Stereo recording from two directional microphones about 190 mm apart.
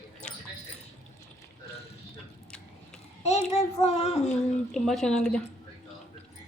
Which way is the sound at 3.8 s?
35° left (ahead or behind).